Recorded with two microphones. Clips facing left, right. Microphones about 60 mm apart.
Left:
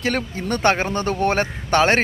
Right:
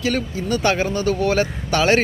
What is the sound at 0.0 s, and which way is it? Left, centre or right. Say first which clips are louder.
Speech: right 1 dB; left.